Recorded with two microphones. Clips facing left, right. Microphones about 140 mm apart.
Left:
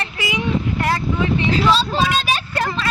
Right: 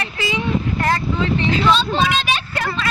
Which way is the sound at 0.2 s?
15° left (ahead or behind).